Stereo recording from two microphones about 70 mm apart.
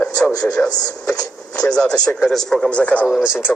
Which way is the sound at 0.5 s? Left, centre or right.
Centre.